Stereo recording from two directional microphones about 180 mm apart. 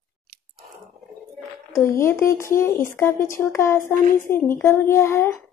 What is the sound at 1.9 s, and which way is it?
A woman's voice, 15° left (ahead or behind).